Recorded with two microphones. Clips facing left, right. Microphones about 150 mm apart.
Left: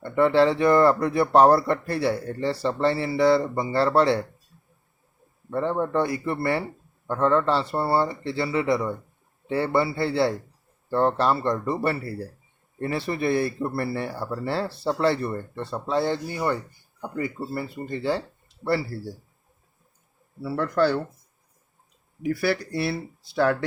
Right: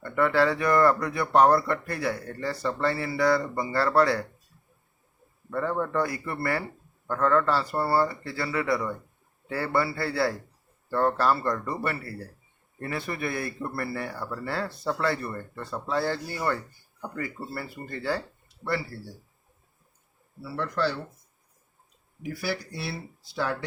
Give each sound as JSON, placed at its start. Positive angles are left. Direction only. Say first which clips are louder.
{"t": 0.0, "sound": "speech", "louder": "left 4 dB", "side_deg": 25}
{"t": 5.5, "sound": "speech", "louder": "left 3 dB", "side_deg": 25}
{"t": 18.6, "sound": "speech", "louder": "left 5 dB", "side_deg": 35}
{"t": 20.4, "sound": "speech", "louder": "left 6 dB", "side_deg": 50}
{"t": 22.4, "sound": "speech", "louder": "left 6 dB", "side_deg": 60}